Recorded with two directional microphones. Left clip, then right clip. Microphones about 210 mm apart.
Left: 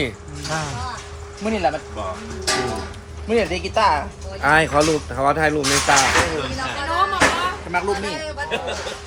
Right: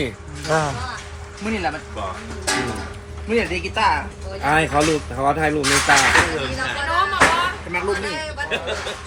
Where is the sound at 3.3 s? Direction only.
50° left (ahead or behind).